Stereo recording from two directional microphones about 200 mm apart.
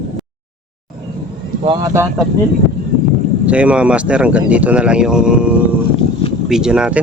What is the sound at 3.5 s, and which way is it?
Speech, 5° right (ahead or behind).